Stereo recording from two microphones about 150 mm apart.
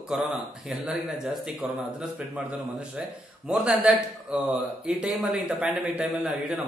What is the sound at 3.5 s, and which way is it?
A man's voice, 5° right (ahead or behind).